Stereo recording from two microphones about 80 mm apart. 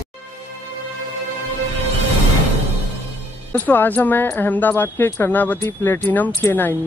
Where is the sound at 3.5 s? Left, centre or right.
Left.